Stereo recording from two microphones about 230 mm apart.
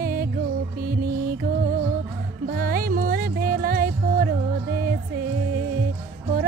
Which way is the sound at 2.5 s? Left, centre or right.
Right.